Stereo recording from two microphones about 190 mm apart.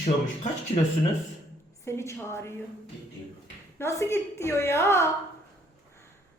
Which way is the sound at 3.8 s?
15° left (ahead or behind).